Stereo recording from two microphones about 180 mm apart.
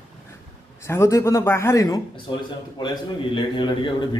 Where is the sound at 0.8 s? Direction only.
15° left (ahead or behind).